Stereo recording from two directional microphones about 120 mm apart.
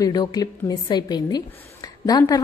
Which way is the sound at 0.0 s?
35° left (ahead or behind).